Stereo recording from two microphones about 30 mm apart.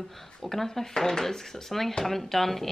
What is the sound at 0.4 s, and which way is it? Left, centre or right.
A woman's voice, centre.